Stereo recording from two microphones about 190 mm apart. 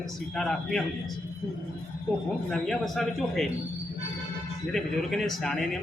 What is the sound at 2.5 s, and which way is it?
Speech, centre (ahead or behind).